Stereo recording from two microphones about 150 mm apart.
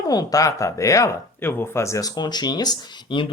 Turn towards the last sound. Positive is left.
turn(degrees=30)  # may be behind; listen again after turning